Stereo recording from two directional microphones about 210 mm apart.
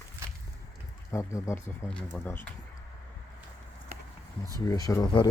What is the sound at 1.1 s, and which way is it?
Speech, 15° left (ahead or behind).